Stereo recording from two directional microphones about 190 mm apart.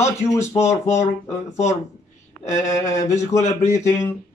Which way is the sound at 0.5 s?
15° left (ahead or behind).